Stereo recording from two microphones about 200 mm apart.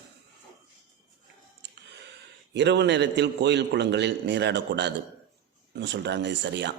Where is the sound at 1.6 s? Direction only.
60° right (ahead or behind).